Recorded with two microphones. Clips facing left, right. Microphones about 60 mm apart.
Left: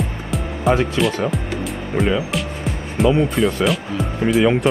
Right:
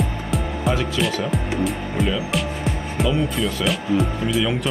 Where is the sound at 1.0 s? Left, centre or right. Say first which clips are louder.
Left 3 dB; centre.